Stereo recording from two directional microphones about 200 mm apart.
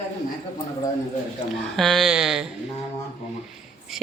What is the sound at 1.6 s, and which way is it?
Speech, centre (ahead or behind).